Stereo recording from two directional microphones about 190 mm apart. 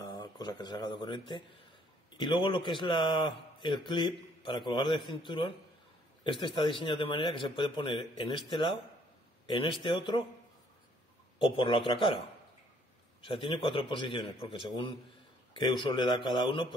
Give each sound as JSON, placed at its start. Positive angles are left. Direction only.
{"t": 0.4, "sound": "speech", "side_deg": 20}
{"t": 11.3, "sound": "speech", "side_deg": 25}
{"t": 13.2, "sound": "speech", "side_deg": 30}